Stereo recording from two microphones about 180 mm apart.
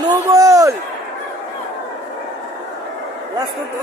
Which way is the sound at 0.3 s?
20° right (ahead or behind).